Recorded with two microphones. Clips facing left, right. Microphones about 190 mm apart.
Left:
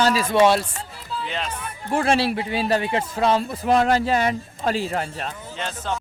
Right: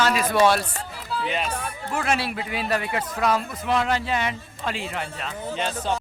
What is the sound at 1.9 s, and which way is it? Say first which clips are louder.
Speech: left 6 dB; 30° left (ahead or behind).